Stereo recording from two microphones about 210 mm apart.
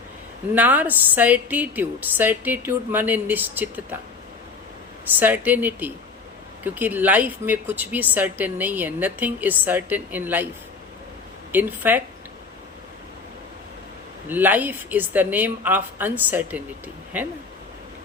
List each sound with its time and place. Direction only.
0.5 s speech: 10° right (ahead or behind)
5.2 s speech: 10° right (ahead or behind)
11.5 s speech: 10° right (ahead or behind)
14.3 s speech: 10° right (ahead or behind)